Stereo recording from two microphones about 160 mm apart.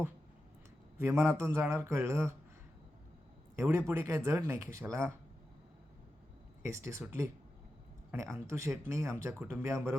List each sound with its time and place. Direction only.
0.9 s speech: 15° right (ahead or behind)
3.5 s speech: 15° right (ahead or behind)
6.6 s speech: 15° right (ahead or behind)